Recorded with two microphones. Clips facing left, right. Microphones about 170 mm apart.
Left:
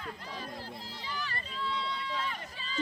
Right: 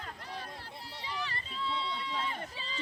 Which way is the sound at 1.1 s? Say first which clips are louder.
Even; 25° right (ahead or behind).